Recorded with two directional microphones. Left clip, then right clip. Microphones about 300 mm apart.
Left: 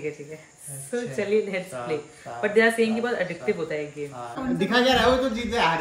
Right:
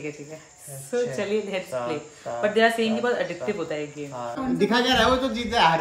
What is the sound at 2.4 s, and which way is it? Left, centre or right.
Speech, centre.